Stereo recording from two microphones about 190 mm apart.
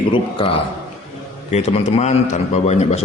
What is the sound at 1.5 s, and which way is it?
A man's voice, 35° left (ahead or behind).